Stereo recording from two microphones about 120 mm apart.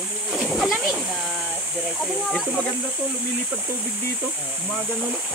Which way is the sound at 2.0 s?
Centre (ahead or behind).